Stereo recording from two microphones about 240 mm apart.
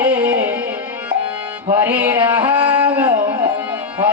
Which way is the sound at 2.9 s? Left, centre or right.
Centre.